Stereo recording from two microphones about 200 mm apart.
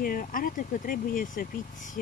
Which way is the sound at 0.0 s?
45° left (ahead or behind).